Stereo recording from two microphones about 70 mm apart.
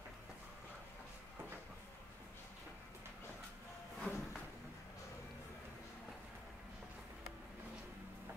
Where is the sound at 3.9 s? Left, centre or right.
Centre.